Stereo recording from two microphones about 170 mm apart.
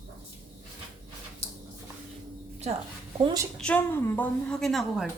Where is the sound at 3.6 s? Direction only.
10° left (ahead or behind).